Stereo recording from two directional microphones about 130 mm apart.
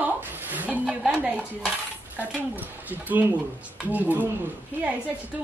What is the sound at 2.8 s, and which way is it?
A woman's voice, 15° right (ahead or behind).